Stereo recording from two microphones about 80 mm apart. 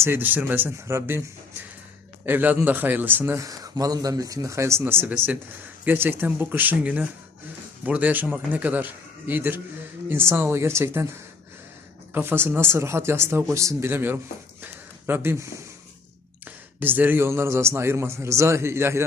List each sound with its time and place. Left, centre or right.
0.0 s a man's voice: right
2.2 s a man's voice: right
3.3 s speech: right
4.8 s a man's voice: right
12.1 s a man's voice: right
13.9 s a man's voice: right
14.6 s a sound: right
16.8 s a man's voice: right